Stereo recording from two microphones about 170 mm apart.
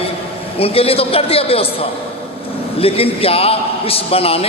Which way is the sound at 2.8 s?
35° left (ahead or behind).